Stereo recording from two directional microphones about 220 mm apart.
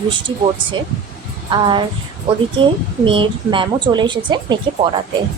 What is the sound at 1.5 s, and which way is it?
Speech, 20° right (ahead or behind).